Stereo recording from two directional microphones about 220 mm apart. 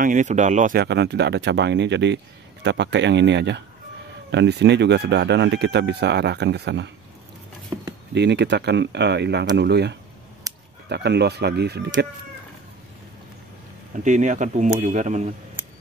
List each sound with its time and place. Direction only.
0.0 s speech: 35° right (ahead or behind); by 6.9 s 50° right (ahead or behind)
7.7 s a sound: 15° right (ahead or behind)
8.1 s speech: 50° right (ahead or behind)
10.4 s a sound: 15° right (ahead or behind)
10.9 s speech: 50° right (ahead or behind)
13.9 s speech: 35° right (ahead or behind)